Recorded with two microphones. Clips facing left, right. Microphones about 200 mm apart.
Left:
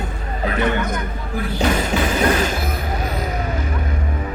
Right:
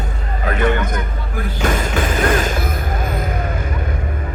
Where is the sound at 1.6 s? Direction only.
50° right (ahead or behind).